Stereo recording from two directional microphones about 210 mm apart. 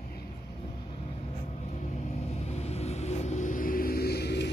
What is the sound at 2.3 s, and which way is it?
Vehicle, 30° left (ahead or behind).